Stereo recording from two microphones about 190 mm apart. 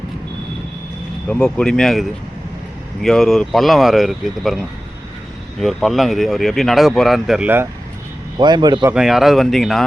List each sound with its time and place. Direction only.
1.3 s speech: 5° left (ahead or behind); by 7.7 s 10° right (ahead or behind)
8.4 s a man's voice: 25° right (ahead or behind)
8.9 s speech: 5° right (ahead or behind)